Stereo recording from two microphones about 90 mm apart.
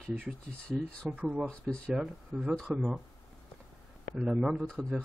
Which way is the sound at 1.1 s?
20° right (ahead or behind).